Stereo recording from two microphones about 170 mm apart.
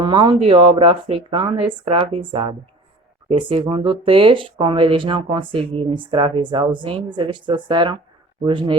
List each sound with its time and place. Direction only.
0.0 s speech: 30° right (ahead or behind)